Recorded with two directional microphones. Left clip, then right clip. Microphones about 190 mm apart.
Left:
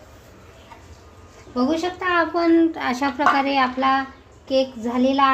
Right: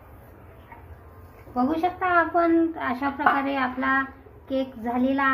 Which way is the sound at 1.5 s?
35° left (ahead or behind).